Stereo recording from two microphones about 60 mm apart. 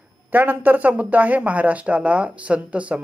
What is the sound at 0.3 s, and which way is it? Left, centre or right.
Speech, right.